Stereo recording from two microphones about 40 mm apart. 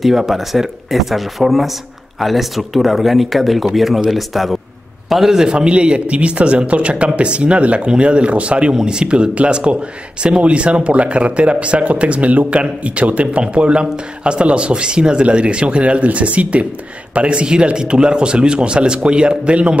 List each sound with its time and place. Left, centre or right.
0.0 s a man's voice: centre
5.5 s a man's voice: right